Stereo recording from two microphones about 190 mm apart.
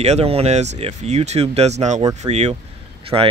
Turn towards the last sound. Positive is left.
turn(degrees=-30)  # may be behind; listen again after turning